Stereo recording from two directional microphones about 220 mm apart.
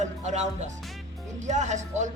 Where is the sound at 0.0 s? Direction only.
30° right (ahead or behind).